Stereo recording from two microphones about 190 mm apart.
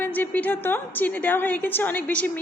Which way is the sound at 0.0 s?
10° left (ahead or behind).